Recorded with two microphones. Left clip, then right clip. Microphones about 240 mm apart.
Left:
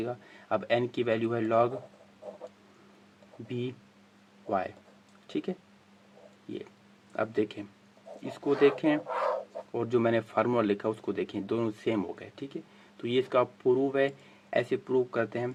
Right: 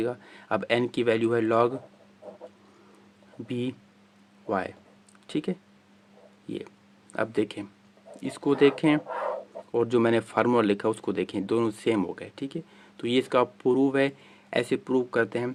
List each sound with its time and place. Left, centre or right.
0.0 s speech: right
3.5 s speech: right
7.1 s speech: right
9.0 s chicken: centre
9.7 s speech: right